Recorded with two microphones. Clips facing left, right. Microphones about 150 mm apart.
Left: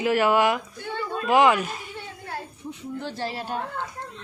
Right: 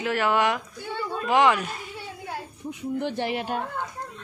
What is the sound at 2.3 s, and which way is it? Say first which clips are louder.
A child's voice: even; 15° right (ahead or behind).